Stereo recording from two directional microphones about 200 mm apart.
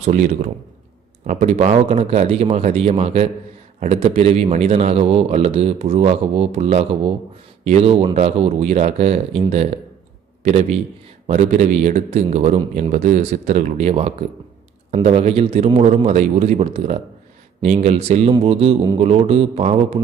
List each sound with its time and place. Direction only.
0.0 s a man's voice: 40° right (ahead or behind)